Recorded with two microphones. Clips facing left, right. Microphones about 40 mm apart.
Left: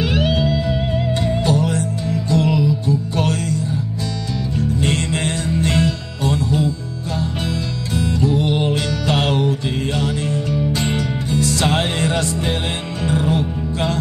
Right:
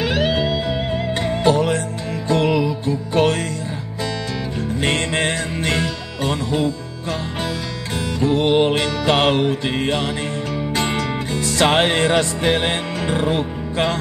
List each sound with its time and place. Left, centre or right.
0.0 s music: right
1.2 s music: right
4.6 s music: right
8.2 s music: right
9.9 s music: right
10.5 s music: right